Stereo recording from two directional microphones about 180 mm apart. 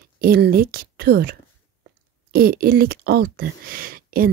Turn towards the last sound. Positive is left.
turn(degrees=-55)  # may be behind; listen again after turning